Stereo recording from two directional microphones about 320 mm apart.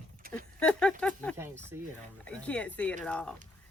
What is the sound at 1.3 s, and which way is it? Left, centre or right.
Speech, centre.